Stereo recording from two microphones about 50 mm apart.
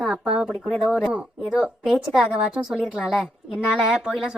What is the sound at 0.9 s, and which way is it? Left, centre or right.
A woman's voice, centre.